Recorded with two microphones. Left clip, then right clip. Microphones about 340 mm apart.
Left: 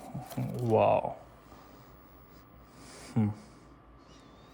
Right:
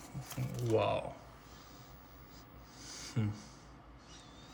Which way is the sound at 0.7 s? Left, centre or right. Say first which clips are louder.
Left 8 dB; centre.